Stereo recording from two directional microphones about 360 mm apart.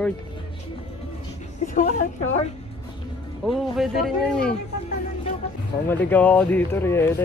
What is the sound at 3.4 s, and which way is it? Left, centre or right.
Speech, centre.